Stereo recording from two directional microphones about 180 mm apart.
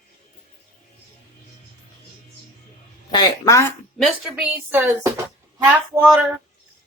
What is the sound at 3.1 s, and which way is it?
Speech, 20° left (ahead or behind).